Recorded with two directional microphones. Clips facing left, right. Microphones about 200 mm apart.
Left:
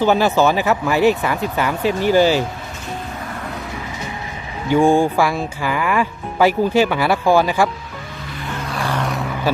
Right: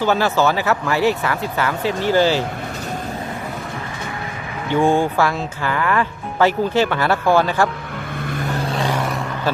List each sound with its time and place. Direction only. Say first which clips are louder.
0.0 s speech: left 2 dB; 15° left (ahead or behind)
4.7 s speech: left 3 dB; 10° left (ahead or behind)
8.4 s vehicle: right 2 dB; 35° right (ahead or behind)
8.9 s vehicle: even; 5° right (ahead or behind)